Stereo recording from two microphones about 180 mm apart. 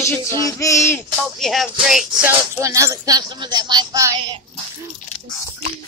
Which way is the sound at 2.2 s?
15° right (ahead or behind).